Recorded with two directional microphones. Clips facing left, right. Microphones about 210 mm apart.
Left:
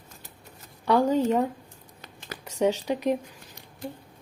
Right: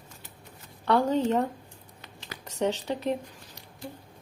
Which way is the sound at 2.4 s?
10° left (ahead or behind).